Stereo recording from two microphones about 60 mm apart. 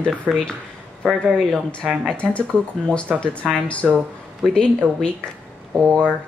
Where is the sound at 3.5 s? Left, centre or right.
Left.